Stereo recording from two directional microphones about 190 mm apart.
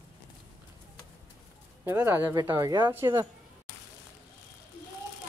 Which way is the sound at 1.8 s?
10° right (ahead or behind).